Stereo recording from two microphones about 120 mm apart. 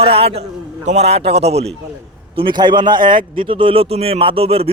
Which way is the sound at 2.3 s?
40° right (ahead or behind).